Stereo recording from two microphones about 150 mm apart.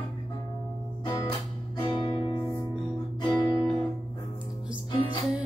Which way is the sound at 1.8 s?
30° left (ahead or behind).